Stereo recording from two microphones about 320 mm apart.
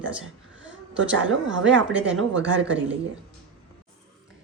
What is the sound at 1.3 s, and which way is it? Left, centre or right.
Speech, right.